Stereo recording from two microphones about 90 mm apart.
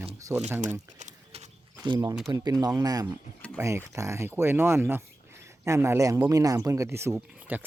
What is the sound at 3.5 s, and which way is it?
Speech, 30° right (ahead or behind).